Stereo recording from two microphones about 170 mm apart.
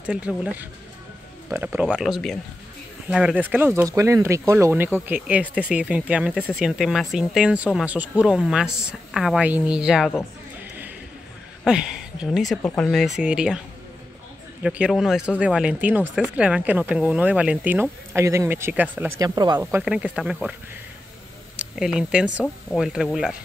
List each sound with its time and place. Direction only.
0.0 s speech: 5° right (ahead or behind)
11.6 s a woman's voice: 5° right (ahead or behind)
14.6 s speech: 5° right (ahead or behind)
19.8 s speech: 5° right (ahead or behind)
21.5 s speech: 5° right (ahead or behind)